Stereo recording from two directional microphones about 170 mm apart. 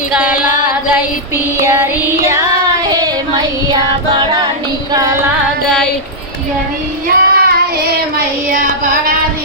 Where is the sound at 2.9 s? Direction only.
25° right (ahead or behind).